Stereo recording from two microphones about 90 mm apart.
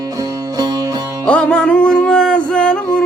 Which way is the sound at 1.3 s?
10° left (ahead or behind).